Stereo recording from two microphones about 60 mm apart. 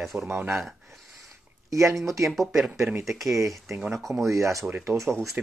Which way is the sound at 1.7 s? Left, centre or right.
Right.